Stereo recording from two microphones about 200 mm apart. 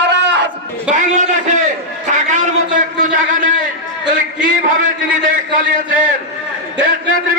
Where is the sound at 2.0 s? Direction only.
40° right (ahead or behind).